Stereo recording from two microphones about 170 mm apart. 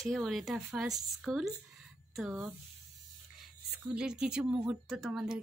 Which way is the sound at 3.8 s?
5° right (ahead or behind).